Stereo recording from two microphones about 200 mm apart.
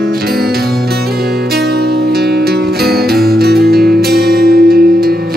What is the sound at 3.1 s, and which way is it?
Music, 50° right (ahead or behind).